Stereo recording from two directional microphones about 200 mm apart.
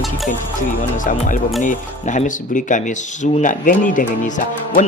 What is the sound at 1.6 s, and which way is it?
Speech, 40° left (ahead or behind).